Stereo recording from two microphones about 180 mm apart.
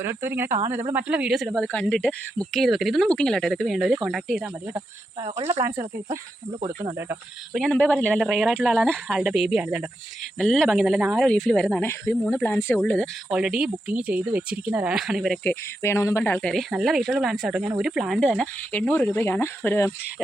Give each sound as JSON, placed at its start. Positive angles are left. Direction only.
{"t": 0.0, "sound": "speech", "side_deg": -15}
{"t": 5.5, "sound": "speech", "side_deg": -15}
{"t": 7.5, "sound": "speech", "side_deg": 5}
{"t": 15.8, "sound": "speech", "side_deg": 15}